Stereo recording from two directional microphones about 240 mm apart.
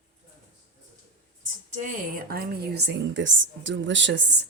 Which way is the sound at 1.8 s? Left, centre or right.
Right.